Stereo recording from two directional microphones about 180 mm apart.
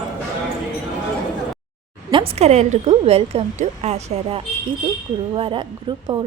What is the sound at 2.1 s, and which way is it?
Speech, 35° right (ahead or behind).